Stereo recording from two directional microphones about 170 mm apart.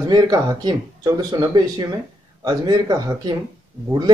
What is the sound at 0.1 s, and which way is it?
Speech, 25° right (ahead or behind).